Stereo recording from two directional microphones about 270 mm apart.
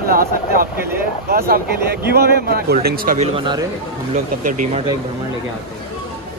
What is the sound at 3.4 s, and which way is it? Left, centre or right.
Speech, centre.